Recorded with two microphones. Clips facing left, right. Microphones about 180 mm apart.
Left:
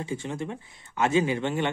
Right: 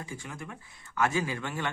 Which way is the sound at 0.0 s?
25° left (ahead or behind).